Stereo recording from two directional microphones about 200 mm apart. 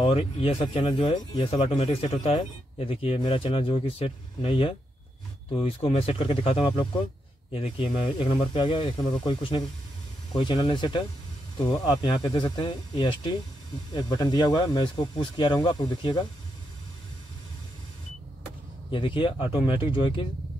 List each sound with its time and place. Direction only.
0.0 s speech: 30° left (ahead or behind)
18.9 s speech: 25° left (ahead or behind)